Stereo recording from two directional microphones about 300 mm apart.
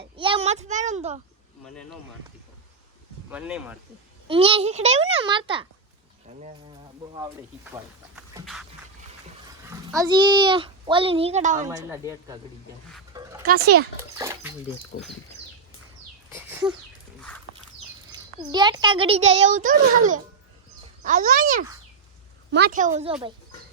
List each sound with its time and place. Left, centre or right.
0.0 s a sound: centre
1.6 s speech: centre
3.2 s speech: centre
4.3 s a child's voice: centre
7.6 s a sound: centre
9.6 s a child's voice: centre
11.7 s a woman's voice: centre
13.1 s music: centre
14.2 s dog: centre
16.3 s a sound: centre
17.2 s a sound: centre
18.5 s a child's voice: centre